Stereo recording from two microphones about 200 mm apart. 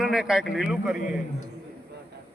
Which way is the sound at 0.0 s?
5° right (ahead or behind).